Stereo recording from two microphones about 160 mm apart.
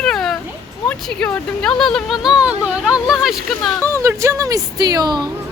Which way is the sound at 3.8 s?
20° right (ahead or behind).